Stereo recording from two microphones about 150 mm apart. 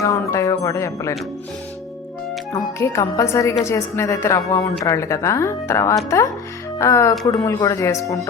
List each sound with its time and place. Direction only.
0.0 s speech: 20° left (ahead or behind)
2.5 s a woman's voice: 20° left (ahead or behind)